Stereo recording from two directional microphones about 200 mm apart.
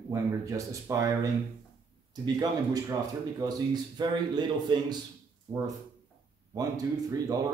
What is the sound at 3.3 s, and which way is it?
A man's voice, 20° right (ahead or behind).